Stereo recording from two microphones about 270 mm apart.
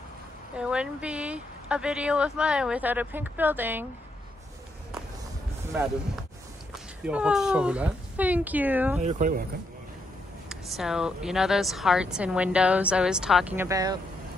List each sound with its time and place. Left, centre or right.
0.6 s a woman's voice: centre
6.7 s speech: centre
9.0 s speech: right
10.5 s a woman's voice: centre